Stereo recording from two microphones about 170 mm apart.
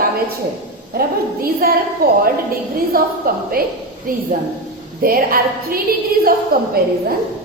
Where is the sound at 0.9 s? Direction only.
60° right (ahead or behind).